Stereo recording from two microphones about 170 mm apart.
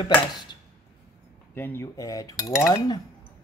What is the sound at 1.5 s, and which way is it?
Speech, 15° left (ahead or behind).